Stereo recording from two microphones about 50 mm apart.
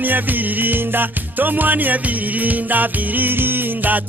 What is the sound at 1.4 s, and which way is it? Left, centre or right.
Music, right.